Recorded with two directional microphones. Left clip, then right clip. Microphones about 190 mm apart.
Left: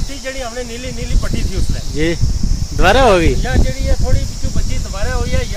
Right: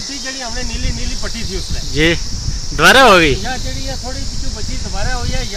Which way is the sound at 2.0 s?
5° left (ahead or behind).